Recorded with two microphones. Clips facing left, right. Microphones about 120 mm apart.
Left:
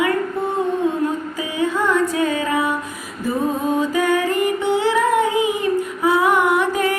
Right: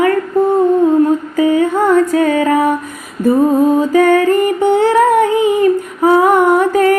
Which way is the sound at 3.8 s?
45° right (ahead or behind).